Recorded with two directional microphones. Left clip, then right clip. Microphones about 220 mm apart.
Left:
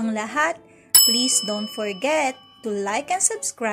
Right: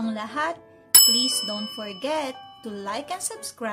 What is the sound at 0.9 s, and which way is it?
Bicycle bell, centre (ahead or behind).